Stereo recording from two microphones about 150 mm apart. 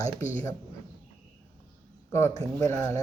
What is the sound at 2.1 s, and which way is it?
Speech, 20° left (ahead or behind).